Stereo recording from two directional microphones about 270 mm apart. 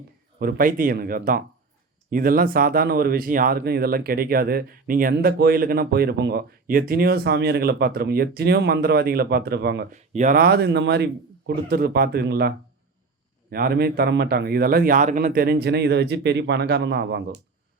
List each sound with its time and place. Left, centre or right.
0.3 s speech: right
9.9 s speech: right